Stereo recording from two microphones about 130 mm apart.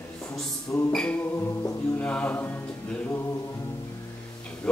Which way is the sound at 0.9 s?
10° left (ahead or behind).